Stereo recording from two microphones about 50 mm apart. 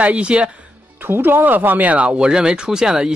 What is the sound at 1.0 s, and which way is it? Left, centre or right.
Speech, right.